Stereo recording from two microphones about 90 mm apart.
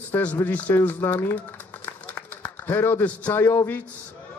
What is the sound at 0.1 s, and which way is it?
A man's voice, 20° left (ahead or behind).